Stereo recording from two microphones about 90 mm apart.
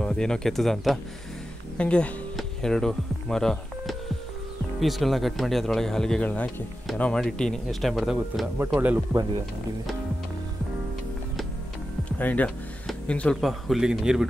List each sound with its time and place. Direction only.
0.0 s speech: 10° left (ahead or behind)
1.8 s speech: 15° left (ahead or behind)
6.2 s speech: 15° left (ahead or behind); by 8.5 s centre (ahead or behind)
8.7 s speech: 20° right (ahead or behind)
12.0 s a sound: 20° left (ahead or behind)
13.0 s speech: 15° left (ahead or behind)
13.4 s speech: centre (ahead or behind)